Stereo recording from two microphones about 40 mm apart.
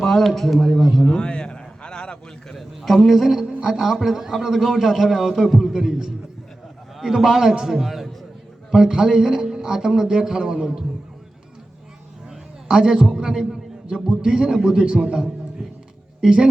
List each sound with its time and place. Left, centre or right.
0.0 s a man's voice: centre
1.0 s a sound: left
2.5 s a man's voice: centre
7.0 s a man's voice: centre
8.7 s a man's voice: centre
12.6 s a man's voice: centre